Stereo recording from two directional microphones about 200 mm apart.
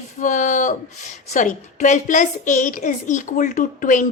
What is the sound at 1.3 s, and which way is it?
A woman's voice, 40° left (ahead or behind).